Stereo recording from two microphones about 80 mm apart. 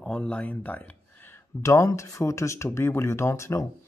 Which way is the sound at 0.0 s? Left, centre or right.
Centre.